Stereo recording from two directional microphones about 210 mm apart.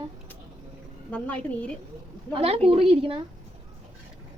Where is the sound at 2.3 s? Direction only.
25° right (ahead or behind).